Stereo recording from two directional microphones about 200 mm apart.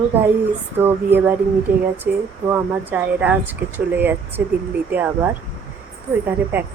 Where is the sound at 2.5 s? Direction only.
10° right (ahead or behind).